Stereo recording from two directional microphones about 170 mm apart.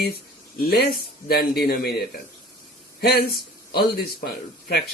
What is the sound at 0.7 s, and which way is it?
Speech, 70° left (ahead or behind).